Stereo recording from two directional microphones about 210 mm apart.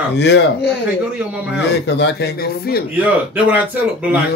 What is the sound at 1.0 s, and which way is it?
Speech, 5° right (ahead or behind).